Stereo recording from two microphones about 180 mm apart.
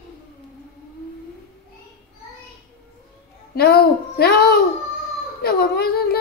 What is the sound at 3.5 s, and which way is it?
A child's voice, 60° left (ahead or behind).